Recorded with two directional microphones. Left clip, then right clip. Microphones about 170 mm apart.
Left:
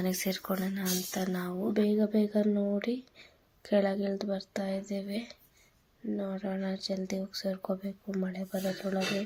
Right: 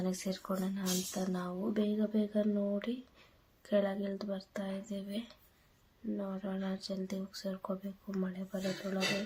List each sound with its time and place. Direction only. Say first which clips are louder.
0.0 s speech: left 5 dB; 15° left (ahead or behind)